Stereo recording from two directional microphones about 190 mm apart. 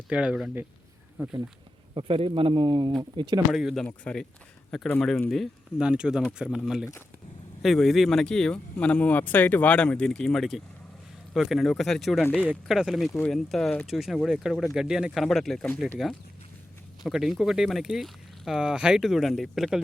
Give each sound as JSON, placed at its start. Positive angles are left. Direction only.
{"t": 0.1, "sound": "speech", "side_deg": -5}
{"t": 2.0, "sound": "speech", "side_deg": -30}
{"t": 3.5, "sound": "speech", "side_deg": 0}